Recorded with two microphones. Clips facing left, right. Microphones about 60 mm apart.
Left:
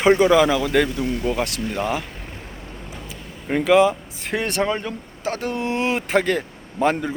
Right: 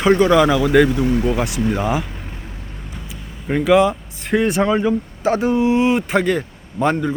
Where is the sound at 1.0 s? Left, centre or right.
Right.